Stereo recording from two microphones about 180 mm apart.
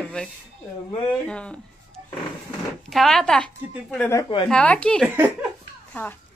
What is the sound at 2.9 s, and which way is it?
A woman's voice, centre (ahead or behind).